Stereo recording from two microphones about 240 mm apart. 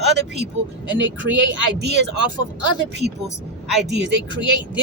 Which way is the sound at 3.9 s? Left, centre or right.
Right.